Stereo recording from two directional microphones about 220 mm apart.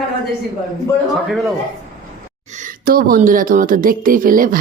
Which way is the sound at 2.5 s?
40° right (ahead or behind).